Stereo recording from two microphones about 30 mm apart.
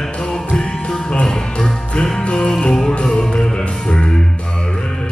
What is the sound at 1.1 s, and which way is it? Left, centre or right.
Music, left.